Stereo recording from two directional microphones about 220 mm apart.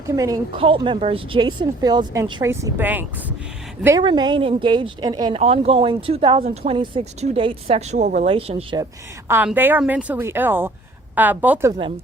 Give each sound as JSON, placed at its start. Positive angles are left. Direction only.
{"t": 0.2, "sound": "speech", "side_deg": -20}
{"t": 8.8, "sound": "a woman's voice", "side_deg": -10}